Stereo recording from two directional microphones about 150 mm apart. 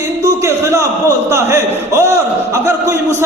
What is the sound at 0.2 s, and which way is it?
A man's voice, 20° right (ahead or behind).